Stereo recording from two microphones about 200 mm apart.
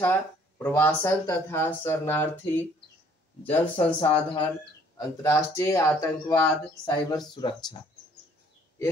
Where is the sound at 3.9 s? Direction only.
25° left (ahead or behind).